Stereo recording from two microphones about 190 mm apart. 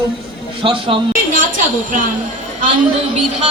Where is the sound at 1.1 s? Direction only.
45° right (ahead or behind).